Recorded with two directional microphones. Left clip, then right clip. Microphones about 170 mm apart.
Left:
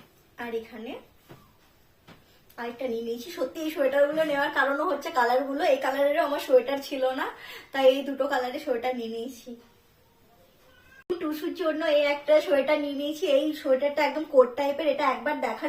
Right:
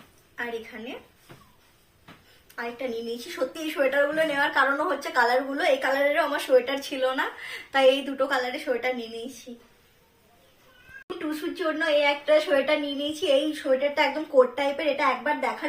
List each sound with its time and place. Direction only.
0.3 s a woman's voice: 5° left (ahead or behind)
2.6 s a woman's voice: 5° left (ahead or behind)
11.2 s a woman's voice: centre (ahead or behind)